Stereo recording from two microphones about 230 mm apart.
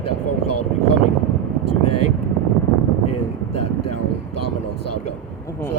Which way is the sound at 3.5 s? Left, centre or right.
Left.